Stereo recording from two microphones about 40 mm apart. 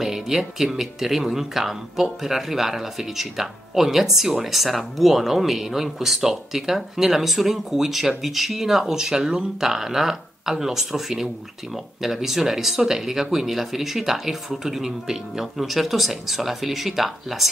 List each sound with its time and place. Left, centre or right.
0.0 s speech: centre